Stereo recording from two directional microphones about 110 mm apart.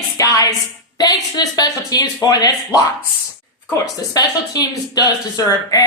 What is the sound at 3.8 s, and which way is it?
Speech, 35° left (ahead or behind).